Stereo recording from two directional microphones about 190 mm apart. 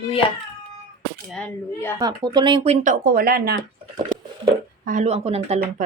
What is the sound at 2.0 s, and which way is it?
Speech, 20° right (ahead or behind).